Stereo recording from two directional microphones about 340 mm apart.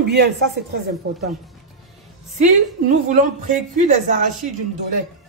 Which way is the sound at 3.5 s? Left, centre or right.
Right.